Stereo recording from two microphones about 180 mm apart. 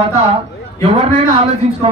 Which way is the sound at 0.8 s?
35° right (ahead or behind).